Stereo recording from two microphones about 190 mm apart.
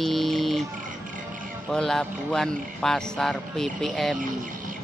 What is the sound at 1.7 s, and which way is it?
Speech, 5° left (ahead or behind).